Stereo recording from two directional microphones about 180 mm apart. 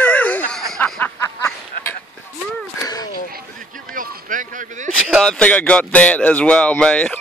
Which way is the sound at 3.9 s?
50° right (ahead or behind).